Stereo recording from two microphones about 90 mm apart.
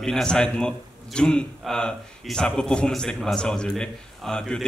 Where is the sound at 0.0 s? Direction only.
10° left (ahead or behind).